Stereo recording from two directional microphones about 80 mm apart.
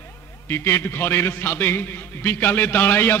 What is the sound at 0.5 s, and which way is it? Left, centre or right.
A man's voice, left.